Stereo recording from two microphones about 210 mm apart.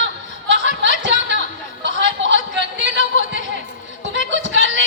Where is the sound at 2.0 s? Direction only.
60° right (ahead or behind).